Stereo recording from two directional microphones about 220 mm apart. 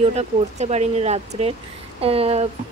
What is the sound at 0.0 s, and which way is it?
Speech, 30° right (ahead or behind).